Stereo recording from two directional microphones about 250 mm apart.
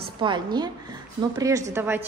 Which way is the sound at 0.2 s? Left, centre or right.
Centre.